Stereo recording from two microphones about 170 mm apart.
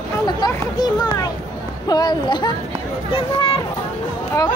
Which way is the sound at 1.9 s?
25° left (ahead or behind).